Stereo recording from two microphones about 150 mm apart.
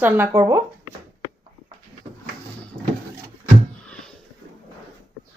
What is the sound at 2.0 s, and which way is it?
Cupboard open or close, 30° right (ahead or behind).